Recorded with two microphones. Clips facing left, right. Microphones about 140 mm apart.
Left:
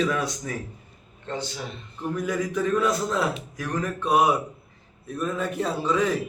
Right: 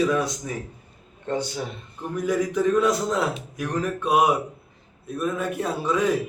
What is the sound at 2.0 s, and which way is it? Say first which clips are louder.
A man's voice: right 2 dB; 15° right (ahead or behind).